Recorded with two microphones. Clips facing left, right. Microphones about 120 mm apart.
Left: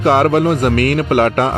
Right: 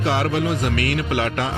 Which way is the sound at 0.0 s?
50° left (ahead or behind).